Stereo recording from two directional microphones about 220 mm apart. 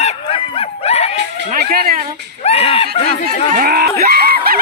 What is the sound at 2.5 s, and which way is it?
Snicker, 25° left (ahead or behind).